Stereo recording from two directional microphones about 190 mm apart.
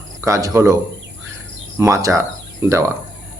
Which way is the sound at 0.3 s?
15° right (ahead or behind).